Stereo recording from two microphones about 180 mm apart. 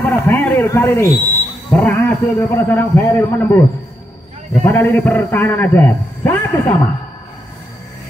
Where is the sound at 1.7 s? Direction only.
10° left (ahead or behind).